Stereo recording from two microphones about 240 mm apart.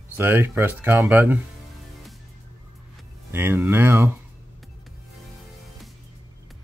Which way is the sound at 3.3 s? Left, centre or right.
Centre.